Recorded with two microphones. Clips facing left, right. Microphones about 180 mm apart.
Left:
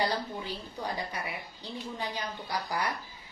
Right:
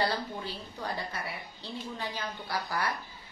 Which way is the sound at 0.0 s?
15° left (ahead or behind).